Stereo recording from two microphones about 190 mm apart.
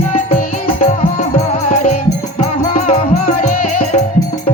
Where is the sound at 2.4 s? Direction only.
40° left (ahead or behind).